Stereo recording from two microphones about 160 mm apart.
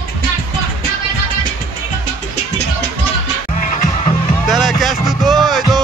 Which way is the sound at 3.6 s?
55° left (ahead or behind).